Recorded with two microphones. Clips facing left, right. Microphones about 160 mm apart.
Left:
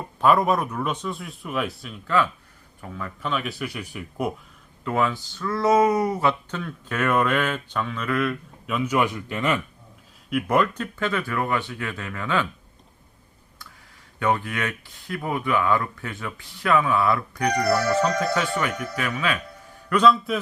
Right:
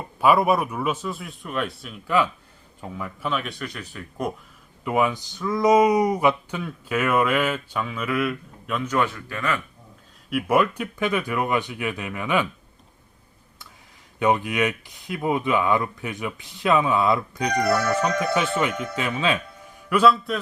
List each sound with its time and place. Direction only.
0.2 s a man's voice: 10° right (ahead or behind)
2.0 s a man's voice: 15° right (ahead or behind); by 4.3 s 10° left (ahead or behind)
4.8 s speech: 15° right (ahead or behind)
8.7 s speech: 10° left (ahead or behind)
10.2 s speech: 5° right (ahead or behind)
14.2 s speech: 20° right (ahead or behind)
19.9 s a man's voice: 5° right (ahead or behind)